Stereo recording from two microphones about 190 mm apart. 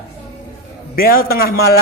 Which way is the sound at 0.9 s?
50° left (ahead or behind).